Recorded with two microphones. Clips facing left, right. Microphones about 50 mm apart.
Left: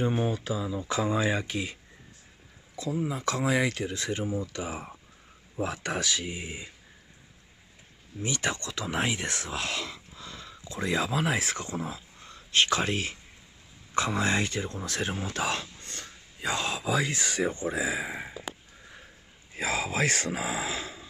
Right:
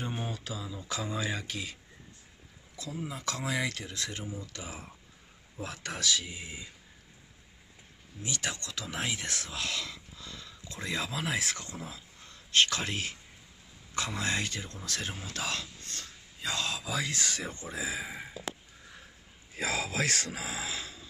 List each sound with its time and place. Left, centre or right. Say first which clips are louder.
0.0 s speech: left 9 dB; centre
3.1 s speech: left 6 dB; left
4.2 s speech: left 9 dB; left
4.5 s speech: left 8 dB; left
8.2 s speech: left 6 dB; left
19.5 s speech: left 3 dB; left